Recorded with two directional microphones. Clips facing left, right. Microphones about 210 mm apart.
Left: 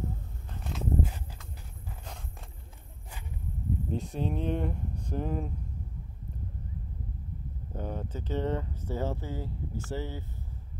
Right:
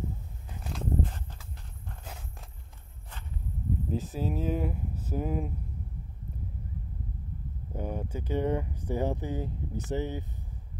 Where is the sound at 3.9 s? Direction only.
Centre (ahead or behind).